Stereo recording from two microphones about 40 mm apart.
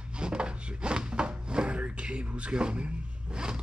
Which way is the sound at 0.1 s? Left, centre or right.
Right.